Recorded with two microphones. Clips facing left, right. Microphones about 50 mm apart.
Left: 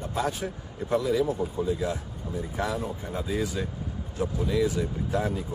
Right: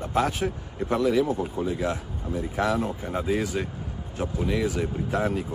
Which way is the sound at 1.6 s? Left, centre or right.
Right.